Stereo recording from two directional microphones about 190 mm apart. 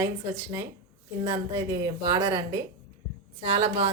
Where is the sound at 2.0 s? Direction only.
20° right (ahead or behind).